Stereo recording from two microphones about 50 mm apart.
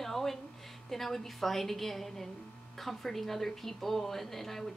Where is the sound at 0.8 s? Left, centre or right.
Centre.